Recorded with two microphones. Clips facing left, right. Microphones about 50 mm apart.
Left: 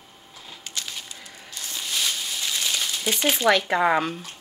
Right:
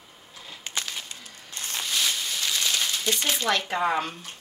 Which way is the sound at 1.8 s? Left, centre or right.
Centre.